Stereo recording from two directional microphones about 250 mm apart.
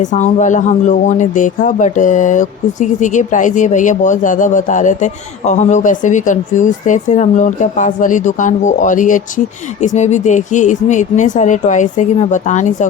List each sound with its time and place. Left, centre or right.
0.0 s speech: left